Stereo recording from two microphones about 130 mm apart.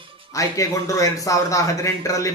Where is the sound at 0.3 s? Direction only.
25° left (ahead or behind).